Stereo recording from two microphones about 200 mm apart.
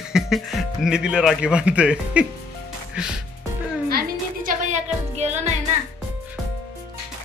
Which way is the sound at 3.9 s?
45° right (ahead or behind).